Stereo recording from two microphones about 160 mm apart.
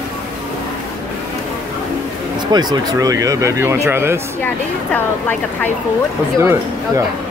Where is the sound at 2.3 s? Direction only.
25° right (ahead or behind).